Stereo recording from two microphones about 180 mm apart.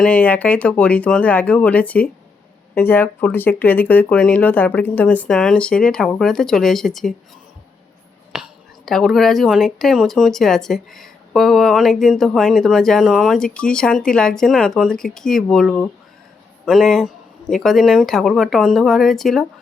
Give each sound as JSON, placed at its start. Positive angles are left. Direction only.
{"t": 0.0, "sound": "speech", "side_deg": 10}
{"t": 8.3, "sound": "whispering", "side_deg": -5}
{"t": 8.9, "sound": "speech", "side_deg": 0}